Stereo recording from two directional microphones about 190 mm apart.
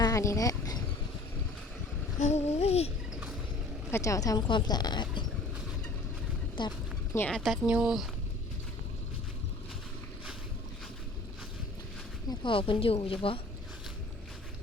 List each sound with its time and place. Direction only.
0.0 s speech: 15° left (ahead or behind)
2.1 s a sound: 40° left (ahead or behind)
3.9 s speech: 15° left (ahead or behind)
6.6 s a sound: 20° left (ahead or behind)
7.2 s speech: 5° left (ahead or behind)
12.3 s speech: 25° left (ahead or behind)